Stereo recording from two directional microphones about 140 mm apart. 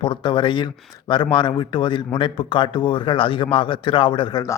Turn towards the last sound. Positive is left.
turn(degrees=30)  # may be behind; listen again after turning